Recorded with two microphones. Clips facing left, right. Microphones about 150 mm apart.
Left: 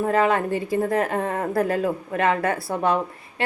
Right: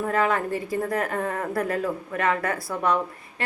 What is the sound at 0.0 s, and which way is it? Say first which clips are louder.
A woman's voice: left 3 dB; 30° left (ahead or behind).